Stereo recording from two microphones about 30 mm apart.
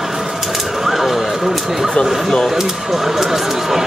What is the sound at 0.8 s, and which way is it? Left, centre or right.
Speech, centre.